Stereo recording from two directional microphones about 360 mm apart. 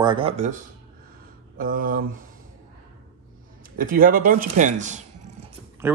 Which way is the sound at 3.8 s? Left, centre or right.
Right.